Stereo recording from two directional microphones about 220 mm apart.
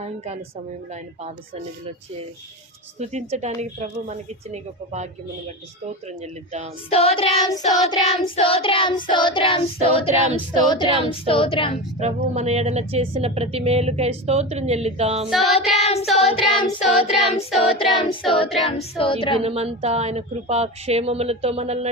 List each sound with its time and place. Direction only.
3.0 s a woman's voice: 30° right (ahead or behind)
6.9 s child singing: 25° left (ahead or behind)
11.9 s speech: 30° right (ahead or behind)
15.3 s child singing: centre (ahead or behind)
15.7 s child singing: 30° left (ahead or behind)
19.4 s speech: 25° right (ahead or behind)